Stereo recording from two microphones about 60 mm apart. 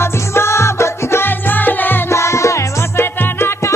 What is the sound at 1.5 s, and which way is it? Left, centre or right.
Music, left.